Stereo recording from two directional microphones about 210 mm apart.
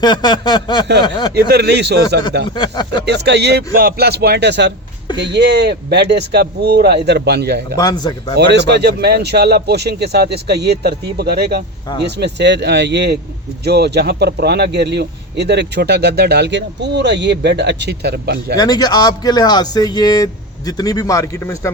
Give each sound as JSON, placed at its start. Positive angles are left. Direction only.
{"t": 0.0, "sound": "a man's voice", "side_deg": 20}
{"t": 1.3, "sound": "speech", "side_deg": -50}
{"t": 2.6, "sound": "a man's voice", "side_deg": 20}
{"t": 3.1, "sound": "speech", "side_deg": -55}
{"t": 7.8, "sound": "a man's voice", "side_deg": 15}
{"t": 8.4, "sound": "speech", "side_deg": -55}
{"t": 18.5, "sound": "a man's voice", "side_deg": 20}